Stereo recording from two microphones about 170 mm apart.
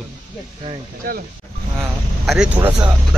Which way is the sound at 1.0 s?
60° right (ahead or behind).